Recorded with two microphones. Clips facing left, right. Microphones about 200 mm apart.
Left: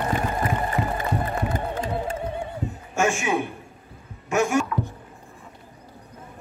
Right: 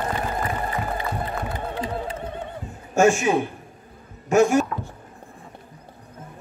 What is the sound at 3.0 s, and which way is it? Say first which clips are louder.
A man's voice: right 5 dB; 35° right (ahead or behind).